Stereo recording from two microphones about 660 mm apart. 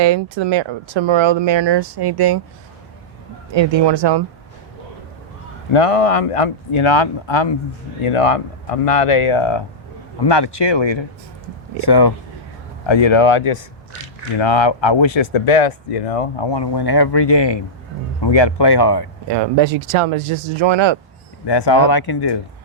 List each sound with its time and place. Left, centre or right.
0.0 s speech: right
3.5 s speech: right
5.7 s speech: left
19.3 s speech: right
21.4 s speech: left